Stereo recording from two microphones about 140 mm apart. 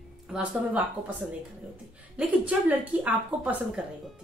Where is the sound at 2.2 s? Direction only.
10° right (ahead or behind).